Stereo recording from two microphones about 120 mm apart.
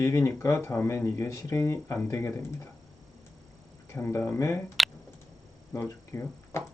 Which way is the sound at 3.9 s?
20° left (ahead or behind).